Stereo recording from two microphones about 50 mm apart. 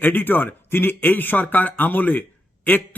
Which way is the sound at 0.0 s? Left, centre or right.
Left.